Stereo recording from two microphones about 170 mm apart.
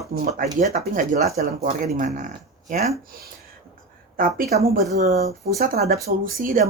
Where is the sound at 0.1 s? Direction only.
65° right (ahead or behind); by 2.9 s 40° right (ahead or behind).